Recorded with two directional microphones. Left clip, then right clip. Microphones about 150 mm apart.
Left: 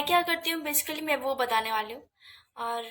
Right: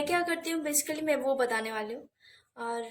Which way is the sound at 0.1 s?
35° left (ahead or behind).